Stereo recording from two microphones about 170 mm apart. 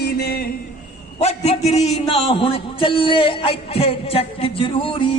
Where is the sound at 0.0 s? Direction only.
65° left (ahead or behind).